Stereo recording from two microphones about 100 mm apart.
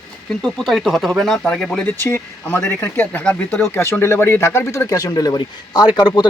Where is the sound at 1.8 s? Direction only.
25° left (ahead or behind).